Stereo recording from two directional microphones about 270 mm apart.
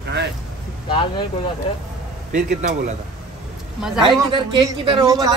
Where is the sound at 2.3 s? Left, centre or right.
Right.